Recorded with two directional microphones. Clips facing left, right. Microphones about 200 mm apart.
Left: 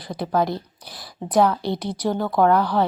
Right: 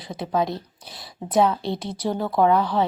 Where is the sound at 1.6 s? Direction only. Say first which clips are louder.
Left 2 dB; 25° right (ahead or behind).